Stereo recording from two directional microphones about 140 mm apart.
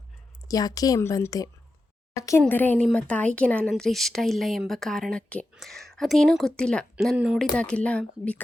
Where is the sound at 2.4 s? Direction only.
10° left (ahead or behind).